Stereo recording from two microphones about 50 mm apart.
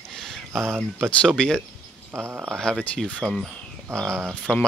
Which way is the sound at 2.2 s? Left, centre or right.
Right.